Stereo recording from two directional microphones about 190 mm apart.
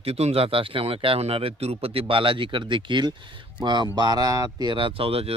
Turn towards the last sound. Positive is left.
turn(degrees=-30)  # may be behind; listen again after turning